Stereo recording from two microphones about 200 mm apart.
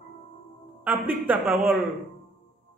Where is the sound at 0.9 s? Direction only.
10° right (ahead or behind).